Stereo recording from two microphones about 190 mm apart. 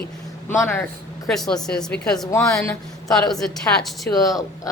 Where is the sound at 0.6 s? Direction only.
15° left (ahead or behind).